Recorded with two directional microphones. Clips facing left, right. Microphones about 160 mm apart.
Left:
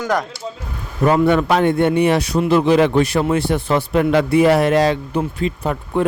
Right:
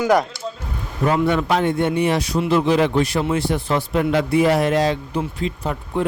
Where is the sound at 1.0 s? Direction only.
55° left (ahead or behind).